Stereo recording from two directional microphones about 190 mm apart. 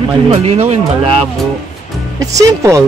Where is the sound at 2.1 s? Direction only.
15° right (ahead or behind).